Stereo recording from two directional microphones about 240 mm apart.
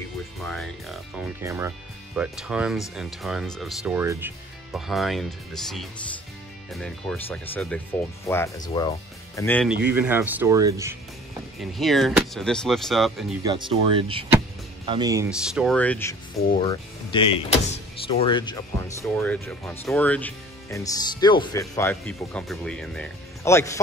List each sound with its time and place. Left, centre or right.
0.5 s music: centre
1.4 s speech: centre
9.8 s speech: centre
11.7 s speech: centre
13.4 s speech: centre
15.2 s speech: centre
16.5 s speech: left
19.1 s speech: centre